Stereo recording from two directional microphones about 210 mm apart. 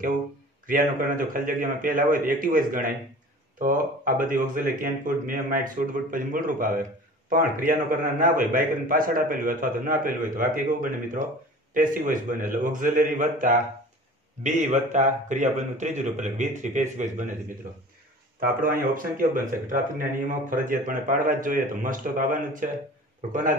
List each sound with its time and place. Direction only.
0.7 s speech: 40° right (ahead or behind)
18.4 s speech: 45° right (ahead or behind)